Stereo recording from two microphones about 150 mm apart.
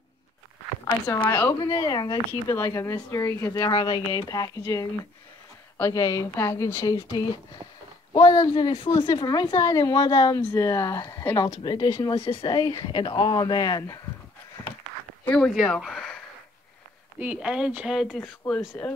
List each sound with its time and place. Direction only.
0.8 s speech: 25° left (ahead or behind)
3.7 s a woman's voice: 30° left (ahead or behind)
15.2 s speech: 5° left (ahead or behind)
17.2 s speech: 10° right (ahead or behind)
18.8 s speech: 10° left (ahead or behind)